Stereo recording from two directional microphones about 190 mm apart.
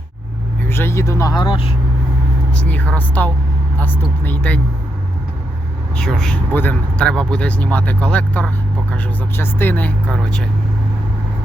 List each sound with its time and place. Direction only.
0.7 s speech: 15° left (ahead or behind)
2.5 s a woman's voice: 10° left (ahead or behind)
6.0 s speech: 5° left (ahead or behind)